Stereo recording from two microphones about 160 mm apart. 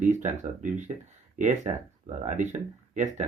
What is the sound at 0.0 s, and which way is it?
Speech, 50° right (ahead or behind).